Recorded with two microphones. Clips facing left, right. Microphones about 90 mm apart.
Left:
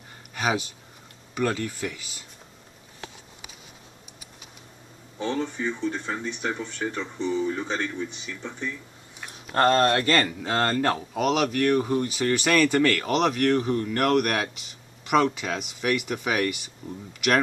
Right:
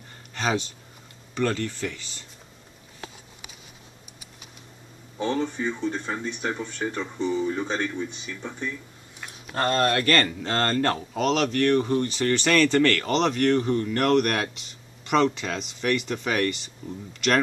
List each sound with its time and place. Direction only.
0.3 s speech: 10° left (ahead or behind)
5.4 s speech: 10° right (ahead or behind)
9.5 s speech: 55° left (ahead or behind)
9.8 s speech: 25° left (ahead or behind)
10.2 s speech: 10° left (ahead or behind)